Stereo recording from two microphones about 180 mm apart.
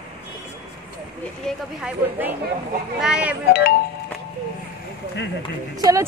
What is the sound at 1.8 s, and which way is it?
A woman's voice, 10° right (ahead or behind).